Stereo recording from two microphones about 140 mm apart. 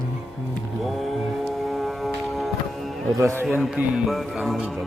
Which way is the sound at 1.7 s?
Centre (ahead or behind).